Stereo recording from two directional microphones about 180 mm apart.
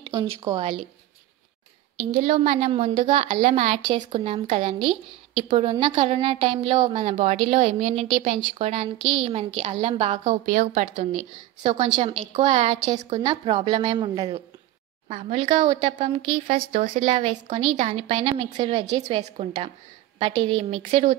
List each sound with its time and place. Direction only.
0.1 s a woman's voice: 20° right (ahead or behind)
2.2 s a woman's voice: 40° right (ahead or behind)
10.4 s a woman's voice: 50° right (ahead or behind); by 16.5 s 30° right (ahead or behind)
16.5 s a woman's voice: 50° right (ahead or behind)
16.9 s a woman's voice: 35° right (ahead or behind)